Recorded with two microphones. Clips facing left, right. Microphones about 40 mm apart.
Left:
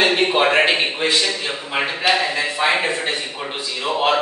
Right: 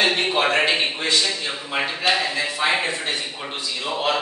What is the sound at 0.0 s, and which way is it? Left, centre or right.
A man's voice, centre.